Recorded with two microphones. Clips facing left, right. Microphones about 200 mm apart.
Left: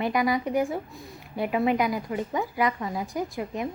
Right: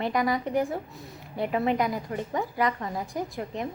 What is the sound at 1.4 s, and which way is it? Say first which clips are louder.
A woman's voice: left 1 dB; 10° left (ahead or behind).